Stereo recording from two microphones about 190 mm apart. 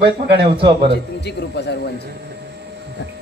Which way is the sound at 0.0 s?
60° right (ahead or behind).